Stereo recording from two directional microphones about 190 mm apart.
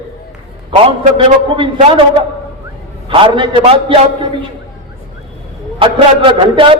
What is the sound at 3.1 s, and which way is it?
A man's voice, 25° right (ahead or behind).